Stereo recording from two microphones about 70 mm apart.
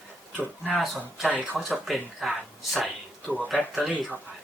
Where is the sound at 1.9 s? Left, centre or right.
Centre.